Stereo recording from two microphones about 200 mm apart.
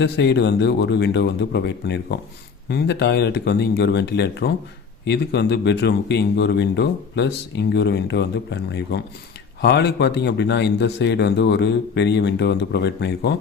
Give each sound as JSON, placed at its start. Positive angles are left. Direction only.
{"t": 0.0, "sound": "speech", "side_deg": 60}